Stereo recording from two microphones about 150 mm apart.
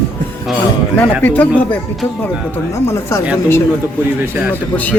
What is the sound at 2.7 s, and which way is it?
Speech, 20° left (ahead or behind).